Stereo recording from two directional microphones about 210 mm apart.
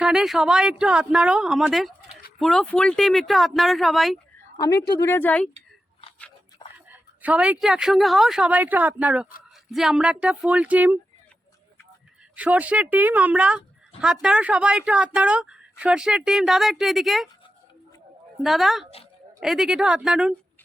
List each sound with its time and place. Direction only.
0.0 s a woman's voice: centre (ahead or behind)
4.5 s speech: 15° left (ahead or behind)
6.6 s a sound: 20° left (ahead or behind)
7.2 s a woman's voice: 5° right (ahead or behind)
12.4 s a woman's voice: 5° right (ahead or behind)
18.4 s a woman's voice: centre (ahead or behind)